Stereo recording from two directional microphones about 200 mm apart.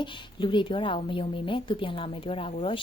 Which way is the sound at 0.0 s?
25° left (ahead or behind).